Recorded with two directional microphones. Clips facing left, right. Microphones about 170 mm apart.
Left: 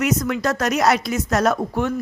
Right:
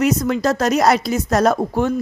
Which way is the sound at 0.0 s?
30° right (ahead or behind).